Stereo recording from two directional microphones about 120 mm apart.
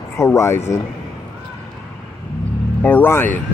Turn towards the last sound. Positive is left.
turn(degrees=15)  # may be behind; listen again after turning